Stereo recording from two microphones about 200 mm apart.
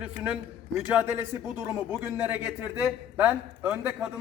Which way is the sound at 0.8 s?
5° right (ahead or behind).